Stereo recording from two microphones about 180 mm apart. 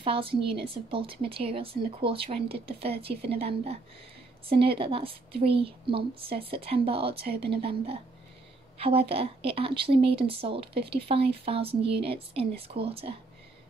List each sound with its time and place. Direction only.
0.0 s a woman's voice: 30° right (ahead or behind)
7.2 s a woman's voice: 65° right (ahead or behind)
7.6 s a woman's voice: 35° right (ahead or behind)